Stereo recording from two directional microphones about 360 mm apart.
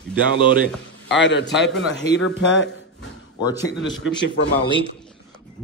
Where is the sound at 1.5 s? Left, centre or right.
Centre.